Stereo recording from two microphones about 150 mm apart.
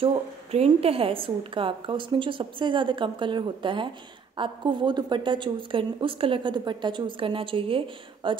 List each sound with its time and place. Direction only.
0.0 s speech: 40° right (ahead or behind)